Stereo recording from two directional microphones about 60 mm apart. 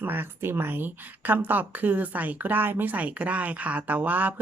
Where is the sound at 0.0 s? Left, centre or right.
Right.